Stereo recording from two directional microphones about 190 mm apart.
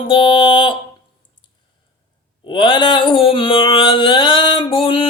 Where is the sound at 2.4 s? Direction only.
25° left (ahead or behind).